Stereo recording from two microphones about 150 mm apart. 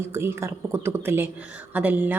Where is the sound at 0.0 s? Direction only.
15° right (ahead or behind).